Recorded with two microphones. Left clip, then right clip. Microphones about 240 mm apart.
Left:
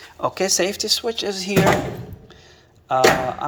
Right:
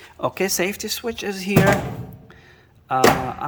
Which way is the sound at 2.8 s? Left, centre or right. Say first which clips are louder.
Left 1 dB; centre.